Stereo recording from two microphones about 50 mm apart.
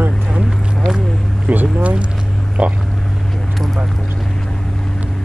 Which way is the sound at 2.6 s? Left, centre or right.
Centre.